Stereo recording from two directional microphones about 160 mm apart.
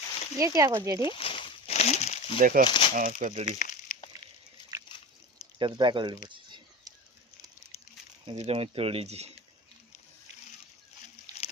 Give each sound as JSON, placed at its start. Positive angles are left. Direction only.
{"t": 0.3, "sound": "speech", "side_deg": -20}
{"t": 1.0, "sound": "a sound", "side_deg": 35}
{"t": 2.4, "sound": "speech", "side_deg": -60}
{"t": 2.6, "sound": "speech", "side_deg": 30}
{"t": 2.9, "sound": "speech", "side_deg": -55}
{"t": 3.4, "sound": "crumpling", "side_deg": 50}
{"t": 5.5, "sound": "a sound", "side_deg": -30}
{"t": 7.6, "sound": "a sound", "side_deg": 40}
{"t": 8.3, "sound": "speech", "side_deg": -35}